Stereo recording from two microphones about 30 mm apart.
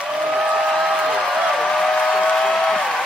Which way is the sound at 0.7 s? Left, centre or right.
Centre.